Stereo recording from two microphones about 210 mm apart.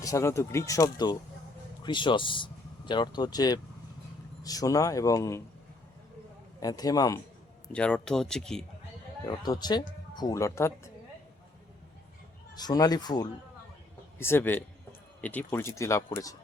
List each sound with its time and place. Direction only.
0.0 s speech: 15° left (ahead or behind)
6.6 s speech: 15° left (ahead or behind)
7.7 s speech: 5° left (ahead or behind)
9.2 s speech: 20° left (ahead or behind)
12.5 s speech: 20° left (ahead or behind)